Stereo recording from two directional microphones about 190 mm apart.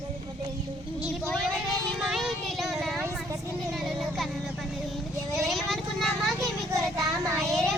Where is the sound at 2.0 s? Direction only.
Centre (ahead or behind).